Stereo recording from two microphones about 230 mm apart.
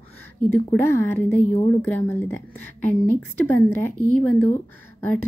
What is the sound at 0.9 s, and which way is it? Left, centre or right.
Speech, centre.